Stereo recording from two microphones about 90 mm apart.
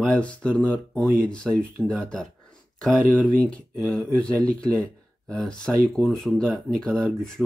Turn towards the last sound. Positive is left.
turn(degrees=5)  # may be behind; listen again after turning